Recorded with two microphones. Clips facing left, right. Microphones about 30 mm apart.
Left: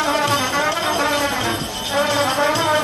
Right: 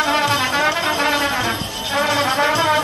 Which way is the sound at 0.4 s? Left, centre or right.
Right.